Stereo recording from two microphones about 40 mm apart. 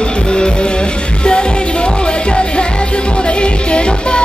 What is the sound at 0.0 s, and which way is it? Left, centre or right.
Music, left.